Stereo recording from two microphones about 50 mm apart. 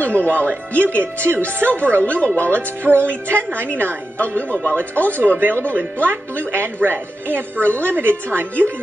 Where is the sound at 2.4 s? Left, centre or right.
Right.